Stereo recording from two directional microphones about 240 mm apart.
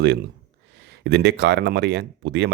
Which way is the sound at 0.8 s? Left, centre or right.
Right.